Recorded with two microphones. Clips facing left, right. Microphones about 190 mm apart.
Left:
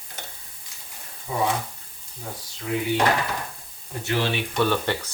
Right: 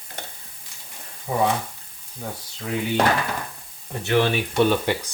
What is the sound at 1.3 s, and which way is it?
Speech, 55° right (ahead or behind).